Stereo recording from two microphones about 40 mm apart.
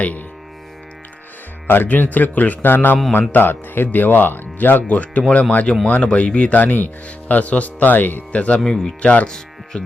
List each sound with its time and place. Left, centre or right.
0.0 s speech: left
1.6 s speech: left
1.9 s speech: left
3.1 s speech: left
3.4 s speech: left
4.9 s speech: left
6.5 s speech: left
8.3 s speech: left
8.6 s speech: centre
9.0 s speech: left
9.7 s speech: left